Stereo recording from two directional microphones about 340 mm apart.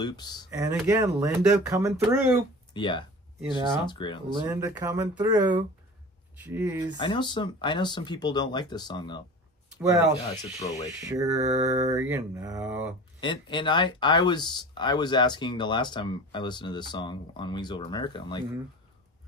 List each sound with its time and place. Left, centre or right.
0.0 s speech: centre
0.5 s speech: centre
2.7 s speech: centre
4.5 s speech: centre
7.0 s speech: centre
10.2 s speech: centre
11.1 s speech: centre
13.2 s speech: centre